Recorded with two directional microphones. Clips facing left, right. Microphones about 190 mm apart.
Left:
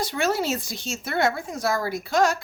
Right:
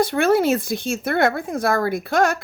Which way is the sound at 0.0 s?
55° right (ahead or behind).